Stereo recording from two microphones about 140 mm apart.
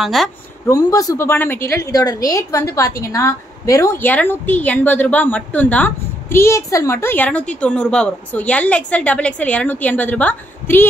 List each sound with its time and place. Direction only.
0.0 s speech: centre (ahead or behind)
0.7 s a woman's voice: 25° left (ahead or behind)